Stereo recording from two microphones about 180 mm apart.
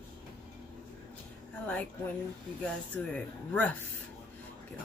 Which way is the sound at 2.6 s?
5° left (ahead or behind).